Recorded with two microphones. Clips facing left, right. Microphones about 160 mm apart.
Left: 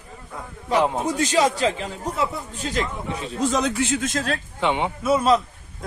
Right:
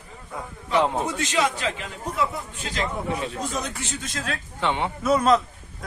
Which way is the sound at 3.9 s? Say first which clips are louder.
Left 7 dB; 50° left (ahead or behind).